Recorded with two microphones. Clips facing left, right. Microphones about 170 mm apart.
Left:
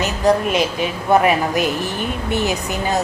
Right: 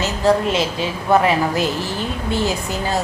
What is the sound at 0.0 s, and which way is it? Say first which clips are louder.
A woman's voice: even; 15° left (ahead or behind).